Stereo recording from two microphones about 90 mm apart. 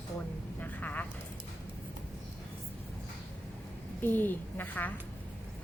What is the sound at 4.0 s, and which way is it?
Speech, 20° left (ahead or behind).